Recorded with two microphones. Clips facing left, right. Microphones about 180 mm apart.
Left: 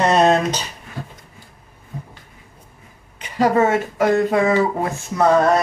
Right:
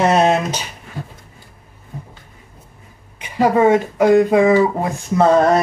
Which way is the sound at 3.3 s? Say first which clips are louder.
Right 3 dB; 10° right (ahead or behind).